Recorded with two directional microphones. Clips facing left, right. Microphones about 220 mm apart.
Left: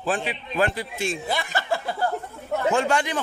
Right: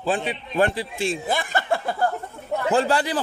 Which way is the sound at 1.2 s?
50° right (ahead or behind).